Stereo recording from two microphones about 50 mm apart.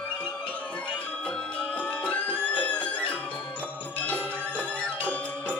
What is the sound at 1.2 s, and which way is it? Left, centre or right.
Music, left.